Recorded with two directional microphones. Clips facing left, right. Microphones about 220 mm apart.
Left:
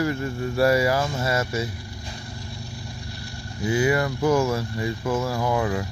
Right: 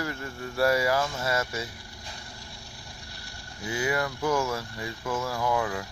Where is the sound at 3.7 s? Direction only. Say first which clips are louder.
Left 7 dB; 10° left (ahead or behind).